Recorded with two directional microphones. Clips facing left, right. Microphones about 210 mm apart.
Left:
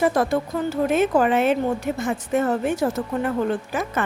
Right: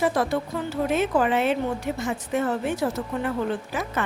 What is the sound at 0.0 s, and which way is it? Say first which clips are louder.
A woman's voice: left 3 dB; 45° left (ahead or behind).